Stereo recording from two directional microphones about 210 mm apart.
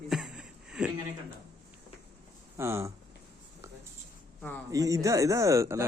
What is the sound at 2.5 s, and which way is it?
Speech, 15° right (ahead or behind).